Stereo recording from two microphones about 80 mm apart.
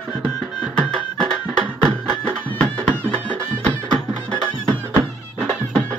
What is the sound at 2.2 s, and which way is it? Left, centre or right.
Music, centre.